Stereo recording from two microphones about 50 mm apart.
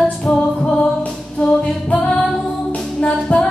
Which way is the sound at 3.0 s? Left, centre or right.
Left.